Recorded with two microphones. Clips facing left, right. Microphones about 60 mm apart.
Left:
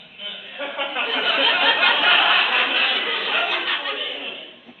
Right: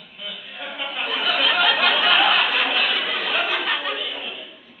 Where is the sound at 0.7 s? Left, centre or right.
Left.